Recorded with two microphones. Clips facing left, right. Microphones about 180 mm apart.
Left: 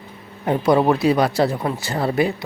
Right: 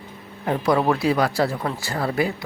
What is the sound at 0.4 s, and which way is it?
Speech, 20° left (ahead or behind).